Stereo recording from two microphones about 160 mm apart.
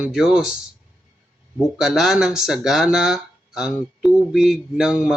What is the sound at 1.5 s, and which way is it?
Speech, centre (ahead or behind).